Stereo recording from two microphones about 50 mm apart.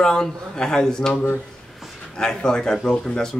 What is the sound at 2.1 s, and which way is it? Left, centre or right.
A man's voice, centre.